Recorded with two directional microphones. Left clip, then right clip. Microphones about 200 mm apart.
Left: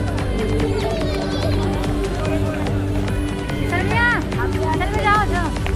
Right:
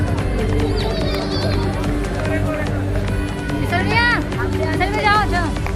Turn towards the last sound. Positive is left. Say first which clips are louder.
# right 2 dB
turn(degrees=-60)  # may be behind; listen again after turning